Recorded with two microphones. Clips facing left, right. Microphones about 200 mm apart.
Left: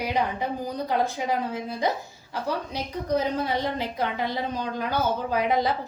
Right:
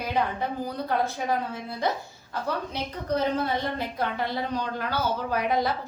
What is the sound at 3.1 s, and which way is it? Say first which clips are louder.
A woman's voice: even; 10° left (ahead or behind).